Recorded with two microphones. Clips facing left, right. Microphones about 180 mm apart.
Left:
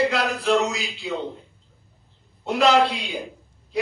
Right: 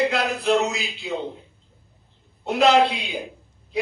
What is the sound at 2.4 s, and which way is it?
Speech, 55° right (ahead or behind).